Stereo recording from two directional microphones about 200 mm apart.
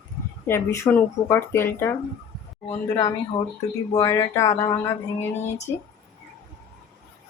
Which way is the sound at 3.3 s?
25° left (ahead or behind).